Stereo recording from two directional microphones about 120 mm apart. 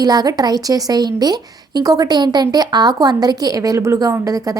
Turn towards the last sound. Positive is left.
turn(degrees=-30)  # may be behind; listen again after turning